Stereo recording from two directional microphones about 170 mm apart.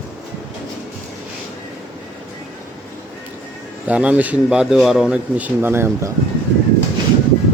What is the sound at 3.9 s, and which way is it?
Speech, 10° right (ahead or behind).